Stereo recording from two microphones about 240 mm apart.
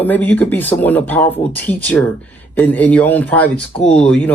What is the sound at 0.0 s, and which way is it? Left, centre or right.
Speech, centre.